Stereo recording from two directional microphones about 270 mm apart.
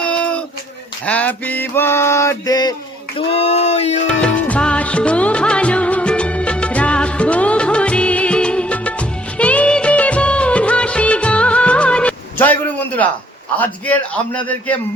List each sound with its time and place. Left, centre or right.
0.0 s a sound: centre
1.0 s male singing: centre
3.2 s speech: left
4.1 s music of bollywood: centre
13.6 s a man's voice: centre